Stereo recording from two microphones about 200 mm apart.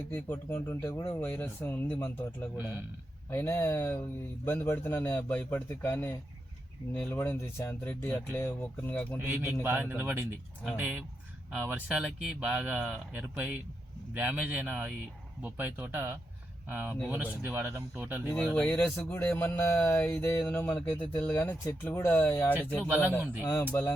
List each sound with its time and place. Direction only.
0.1 s speech: 10° left (ahead or behind)
9.1 s speech: 10° right (ahead or behind)
18.3 s speech: 5° left (ahead or behind)
22.9 s speech: 10° right (ahead or behind)
23.4 s speech: 15° left (ahead or behind)